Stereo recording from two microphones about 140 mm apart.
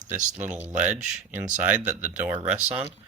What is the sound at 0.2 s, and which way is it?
Speech, 60° right (ahead or behind).